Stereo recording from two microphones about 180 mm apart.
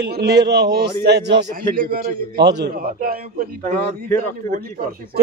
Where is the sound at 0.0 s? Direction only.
65° right (ahead or behind).